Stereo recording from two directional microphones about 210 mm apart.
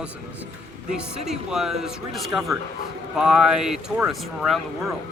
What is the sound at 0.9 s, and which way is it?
Speech, 5° right (ahead or behind).